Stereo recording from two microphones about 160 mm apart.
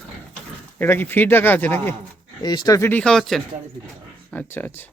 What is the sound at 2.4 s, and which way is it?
Speech, 25° left (ahead or behind).